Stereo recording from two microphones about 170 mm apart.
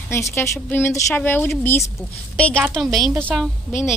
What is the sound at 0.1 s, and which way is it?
A woman's voice, 15° left (ahead or behind).